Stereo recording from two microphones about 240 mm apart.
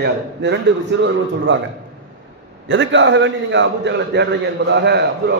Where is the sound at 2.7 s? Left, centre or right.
Right.